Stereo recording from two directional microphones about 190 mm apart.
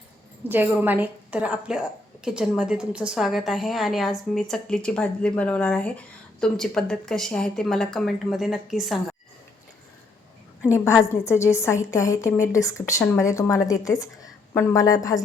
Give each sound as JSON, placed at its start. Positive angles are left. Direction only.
{"t": 0.4, "sound": "a woman's voice", "side_deg": -10}
{"t": 10.7, "sound": "a woman's voice", "side_deg": 15}